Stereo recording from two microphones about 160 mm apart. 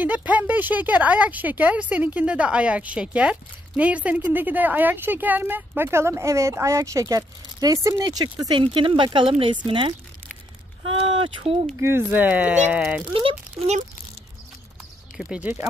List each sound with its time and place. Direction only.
0.0 s a child's voice: 10° right (ahead or behind); by 11.5 s 35° right (ahead or behind)
11.8 s speech: 15° right (ahead or behind)
13.1 s a child's voice: 35° right (ahead or behind)
15.1 s speech: 5° right (ahead or behind)